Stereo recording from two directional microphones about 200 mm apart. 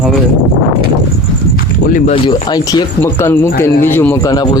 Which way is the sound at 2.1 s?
20° left (ahead or behind).